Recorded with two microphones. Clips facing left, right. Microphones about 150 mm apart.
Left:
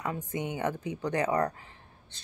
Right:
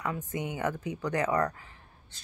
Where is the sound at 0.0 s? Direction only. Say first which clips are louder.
Even; 25° left (ahead or behind).